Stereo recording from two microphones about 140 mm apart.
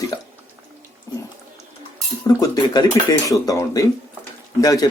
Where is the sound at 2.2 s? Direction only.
30° left (ahead or behind).